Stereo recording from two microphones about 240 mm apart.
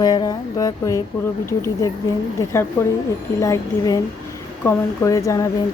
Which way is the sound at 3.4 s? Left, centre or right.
Centre.